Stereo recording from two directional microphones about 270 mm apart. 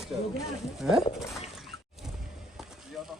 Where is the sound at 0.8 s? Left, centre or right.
Centre.